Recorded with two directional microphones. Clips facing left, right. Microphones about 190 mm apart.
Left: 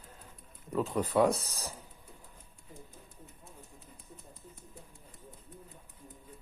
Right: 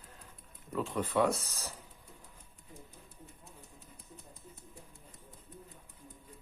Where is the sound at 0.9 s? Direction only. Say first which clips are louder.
Left 3 dB; 40° left (ahead or behind).